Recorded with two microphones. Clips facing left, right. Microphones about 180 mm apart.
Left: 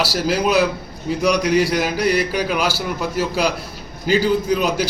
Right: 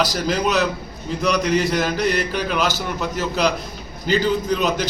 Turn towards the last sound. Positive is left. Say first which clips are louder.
# left 2 dB
turn(degrees=10)  # may be behind; listen again after turning